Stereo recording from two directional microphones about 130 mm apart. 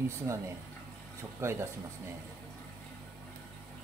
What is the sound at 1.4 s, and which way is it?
Speech, 20° right (ahead or behind).